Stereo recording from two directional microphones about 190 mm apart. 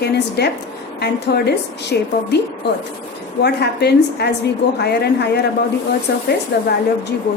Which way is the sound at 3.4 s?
60° left (ahead or behind).